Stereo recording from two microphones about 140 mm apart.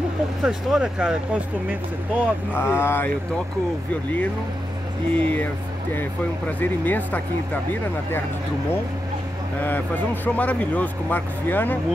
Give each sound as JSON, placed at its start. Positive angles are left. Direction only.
{"t": 0.4, "sound": "speech", "side_deg": -5}
{"t": 2.5, "sound": "speech", "side_deg": 15}
{"t": 5.2, "sound": "speech", "side_deg": 10}
{"t": 6.6, "sound": "speech", "side_deg": 15}
{"t": 10.2, "sound": "speech", "side_deg": 10}